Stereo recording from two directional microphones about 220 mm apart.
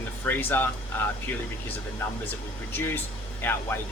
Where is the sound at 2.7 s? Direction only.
10° left (ahead or behind).